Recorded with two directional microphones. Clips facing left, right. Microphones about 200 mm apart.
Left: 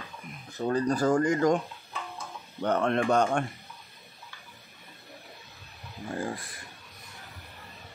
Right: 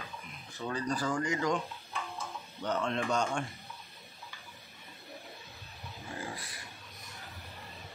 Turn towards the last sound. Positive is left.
turn(degrees=50)  # may be behind; listen again after turning